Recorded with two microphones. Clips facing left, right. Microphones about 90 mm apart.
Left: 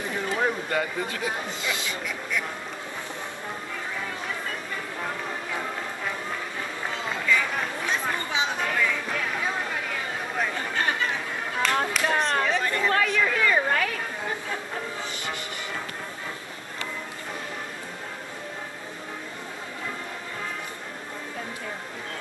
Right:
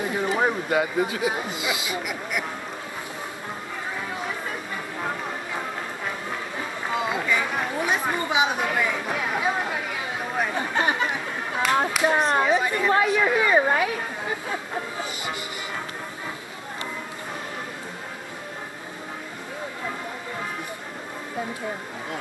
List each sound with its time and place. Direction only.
0.4 s speech: 15° right (ahead or behind)
7.1 s chatter: 15° right (ahead or behind)
11.6 s speech: 10° right (ahead or behind)